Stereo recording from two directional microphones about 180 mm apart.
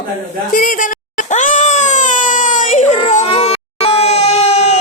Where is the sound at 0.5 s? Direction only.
50° left (ahead or behind).